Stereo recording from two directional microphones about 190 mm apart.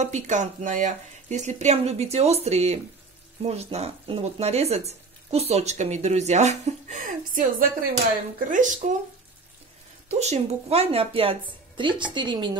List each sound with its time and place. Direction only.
0.0 s speech: 40° right (ahead or behind)
10.0 s speech: 35° right (ahead or behind)